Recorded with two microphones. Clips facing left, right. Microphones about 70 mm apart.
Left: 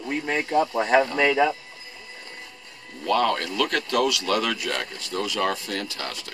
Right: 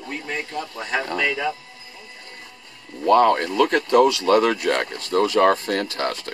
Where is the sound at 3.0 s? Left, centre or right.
Right.